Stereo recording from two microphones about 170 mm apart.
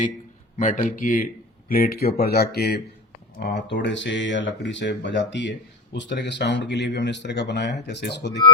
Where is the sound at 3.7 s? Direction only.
90° left.